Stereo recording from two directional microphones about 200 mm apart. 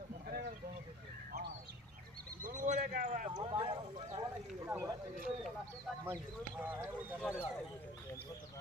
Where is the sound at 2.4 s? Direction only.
40° right (ahead or behind).